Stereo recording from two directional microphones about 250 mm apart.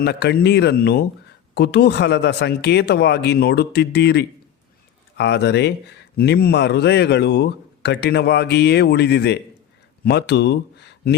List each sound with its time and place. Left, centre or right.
0.0 s a man's voice: left